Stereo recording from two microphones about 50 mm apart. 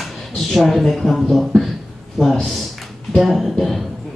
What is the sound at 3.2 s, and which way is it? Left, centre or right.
Speech, centre.